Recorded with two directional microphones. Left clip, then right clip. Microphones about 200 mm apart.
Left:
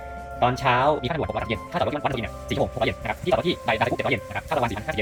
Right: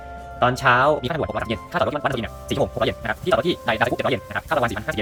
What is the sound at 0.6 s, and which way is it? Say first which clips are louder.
Speech: right 5 dB; 35° right (ahead or behind).